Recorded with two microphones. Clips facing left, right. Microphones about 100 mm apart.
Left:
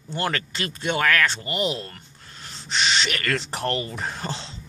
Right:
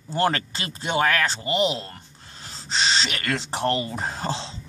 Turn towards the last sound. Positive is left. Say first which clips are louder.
# right 3 dB
turn(degrees=-30)  # may be behind; listen again after turning